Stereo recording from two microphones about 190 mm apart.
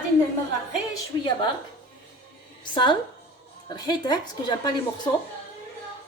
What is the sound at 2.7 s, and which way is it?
A woman's voice, 25° left (ahead or behind).